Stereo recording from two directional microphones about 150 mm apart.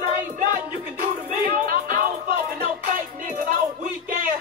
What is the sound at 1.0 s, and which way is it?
Music, 70° right (ahead or behind).